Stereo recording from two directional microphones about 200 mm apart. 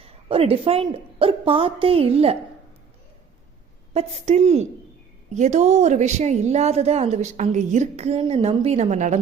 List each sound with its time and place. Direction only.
0.0 s a woman's voice: 30° right (ahead or behind)
3.9 s a woman's voice: 35° right (ahead or behind)